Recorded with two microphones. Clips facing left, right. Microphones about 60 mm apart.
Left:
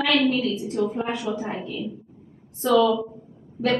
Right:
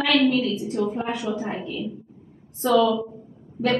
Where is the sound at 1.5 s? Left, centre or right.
Centre.